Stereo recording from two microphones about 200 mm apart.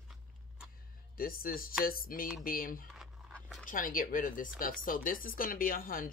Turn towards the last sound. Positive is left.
turn(degrees=45)  # may be behind; listen again after turning